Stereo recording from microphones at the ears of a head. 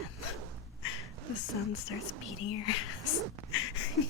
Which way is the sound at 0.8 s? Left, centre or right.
Left.